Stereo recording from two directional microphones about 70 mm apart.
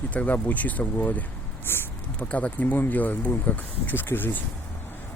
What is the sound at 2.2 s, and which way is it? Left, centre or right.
Speech, centre.